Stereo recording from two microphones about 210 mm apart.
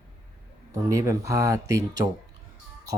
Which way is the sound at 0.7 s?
15° right (ahead or behind).